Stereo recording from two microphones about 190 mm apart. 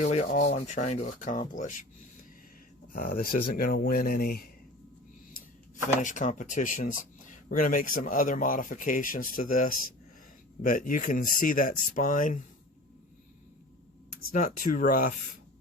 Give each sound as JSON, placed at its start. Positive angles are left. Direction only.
{"t": 0.0, "sound": "rub", "side_deg": 35}
{"t": 2.9, "sound": "speech", "side_deg": 45}
{"t": 6.0, "sound": "speech", "side_deg": 40}
{"t": 14.3, "sound": "speech", "side_deg": 40}